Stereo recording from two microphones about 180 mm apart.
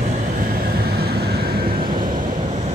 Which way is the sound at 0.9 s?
60° right (ahead or behind).